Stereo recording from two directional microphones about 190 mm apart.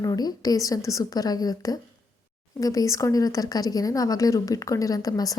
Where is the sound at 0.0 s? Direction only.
20° left (ahead or behind).